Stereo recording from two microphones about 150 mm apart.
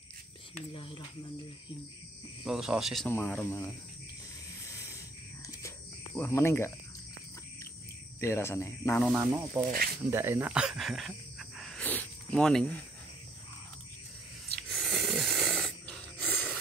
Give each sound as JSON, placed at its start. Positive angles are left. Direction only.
{"t": 0.6, "sound": "speech", "side_deg": 35}
{"t": 2.4, "sound": "speech", "side_deg": -5}
{"t": 6.1, "sound": "speech", "side_deg": 15}
{"t": 8.2, "sound": "speech", "side_deg": 15}
{"t": 9.2, "sound": "speech", "side_deg": -20}
{"t": 14.7, "sound": "snoring", "side_deg": 0}